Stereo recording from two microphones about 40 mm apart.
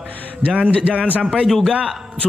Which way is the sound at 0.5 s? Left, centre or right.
Right.